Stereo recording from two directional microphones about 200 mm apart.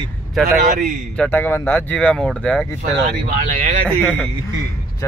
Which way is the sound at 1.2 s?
10° left (ahead or behind).